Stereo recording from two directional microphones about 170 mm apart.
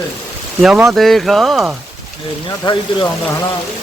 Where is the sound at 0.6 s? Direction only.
Centre (ahead or behind).